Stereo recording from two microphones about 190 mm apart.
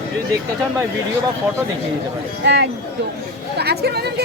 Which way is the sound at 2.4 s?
65° right (ahead or behind).